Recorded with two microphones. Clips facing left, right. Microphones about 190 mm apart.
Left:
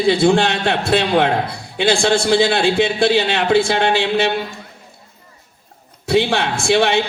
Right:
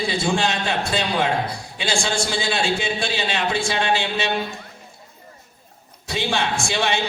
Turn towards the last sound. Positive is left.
turn(degrees=60)  # may be behind; listen again after turning